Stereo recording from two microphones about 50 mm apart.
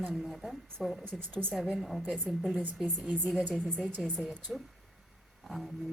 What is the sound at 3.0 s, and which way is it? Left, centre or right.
Speech, right.